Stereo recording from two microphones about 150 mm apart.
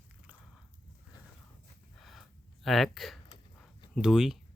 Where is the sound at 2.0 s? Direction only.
Centre (ahead or behind).